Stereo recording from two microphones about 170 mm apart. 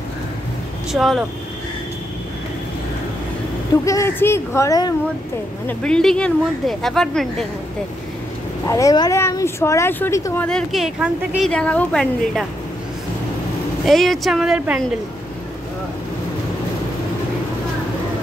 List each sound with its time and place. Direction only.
0.9 s speech: centre (ahead or behind)
3.8 s speech: 15° left (ahead or behind)
5.7 s speech: 5° left (ahead or behind)
8.6 s speech: 20° left (ahead or behind)
13.8 s speech: centre (ahead or behind)